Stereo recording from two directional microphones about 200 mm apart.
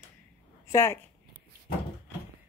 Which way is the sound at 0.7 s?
15° left (ahead or behind).